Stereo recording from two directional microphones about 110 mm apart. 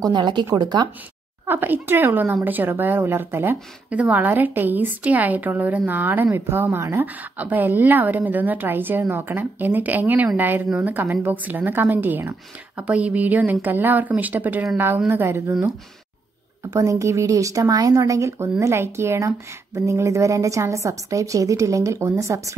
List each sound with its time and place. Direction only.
0.0 s speech: 45° right (ahead or behind)
1.5 s a woman's voice: 20° right (ahead or behind)
16.7 s speech: 30° right (ahead or behind)